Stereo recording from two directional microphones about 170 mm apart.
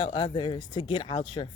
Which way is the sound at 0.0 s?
30° left (ahead or behind).